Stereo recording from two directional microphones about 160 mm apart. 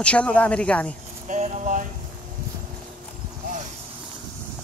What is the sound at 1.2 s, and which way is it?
Speech, 50° right (ahead or behind).